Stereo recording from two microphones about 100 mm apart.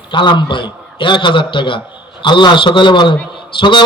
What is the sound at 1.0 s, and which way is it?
Mantra, 55° left (ahead or behind).